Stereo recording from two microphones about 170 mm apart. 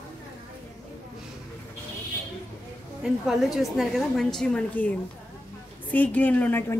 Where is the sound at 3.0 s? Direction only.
Centre (ahead or behind).